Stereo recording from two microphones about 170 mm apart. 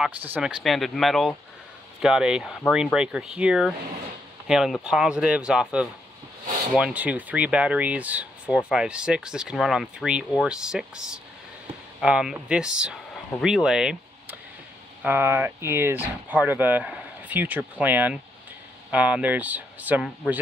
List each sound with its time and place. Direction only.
0.0 s speech: 5° right (ahead or behind)